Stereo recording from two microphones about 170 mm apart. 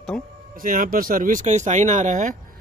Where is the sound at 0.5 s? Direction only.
55° right (ahead or behind).